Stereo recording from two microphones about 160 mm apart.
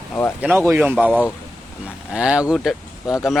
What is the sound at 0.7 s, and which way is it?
Speech, 15° right (ahead or behind).